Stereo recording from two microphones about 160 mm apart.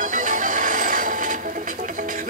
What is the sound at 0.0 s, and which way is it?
Music, 55° right (ahead or behind).